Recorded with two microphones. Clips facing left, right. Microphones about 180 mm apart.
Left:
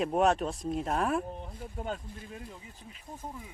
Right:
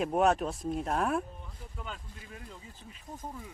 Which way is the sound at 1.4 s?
45° left (ahead or behind).